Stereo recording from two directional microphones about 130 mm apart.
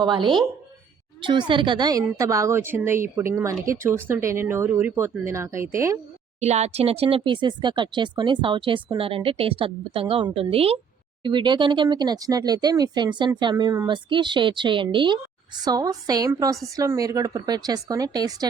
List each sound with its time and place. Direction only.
0.0 s a woman's voice: 35° right (ahead or behind); by 6.0 s 20° right (ahead or behind)
6.4 s a woman's voice: 60° right (ahead or behind)
11.2 s a woman's voice: 40° right (ahead or behind)